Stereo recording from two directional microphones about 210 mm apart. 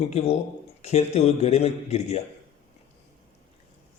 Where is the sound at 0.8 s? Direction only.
30° left (ahead or behind).